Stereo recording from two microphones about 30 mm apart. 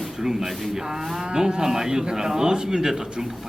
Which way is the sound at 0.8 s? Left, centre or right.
Centre.